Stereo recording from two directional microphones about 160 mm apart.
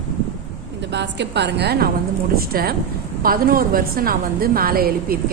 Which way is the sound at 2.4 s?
70° right (ahead or behind).